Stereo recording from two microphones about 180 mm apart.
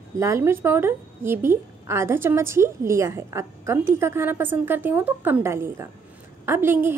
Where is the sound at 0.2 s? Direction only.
15° right (ahead or behind).